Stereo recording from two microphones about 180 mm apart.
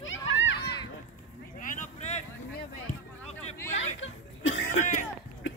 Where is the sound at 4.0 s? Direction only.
90° left.